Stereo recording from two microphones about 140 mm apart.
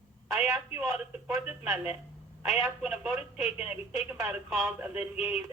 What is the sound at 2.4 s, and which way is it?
Speech, 10° right (ahead or behind).